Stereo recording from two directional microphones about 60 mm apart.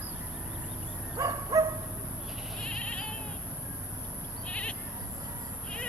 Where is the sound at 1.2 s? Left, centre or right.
Right.